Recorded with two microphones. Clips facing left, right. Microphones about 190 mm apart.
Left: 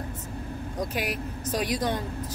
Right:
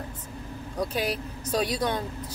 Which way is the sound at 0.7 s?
15° left (ahead or behind).